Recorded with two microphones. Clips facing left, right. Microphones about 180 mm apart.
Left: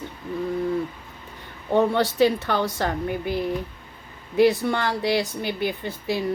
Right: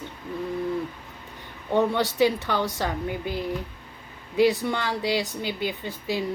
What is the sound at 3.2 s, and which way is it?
Speech, 15° left (ahead or behind).